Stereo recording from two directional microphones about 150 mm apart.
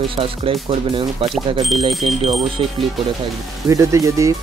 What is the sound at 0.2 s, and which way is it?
Speech, 40° right (ahead or behind).